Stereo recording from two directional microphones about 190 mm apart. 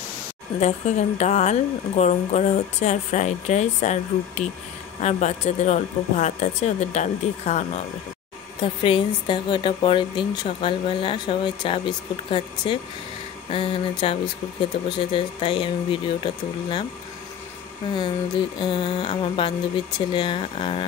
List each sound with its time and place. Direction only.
0.6 s speech: 35° left (ahead or behind)
8.8 s speech: 25° left (ahead or behind)
17.9 s speech: 25° left (ahead or behind)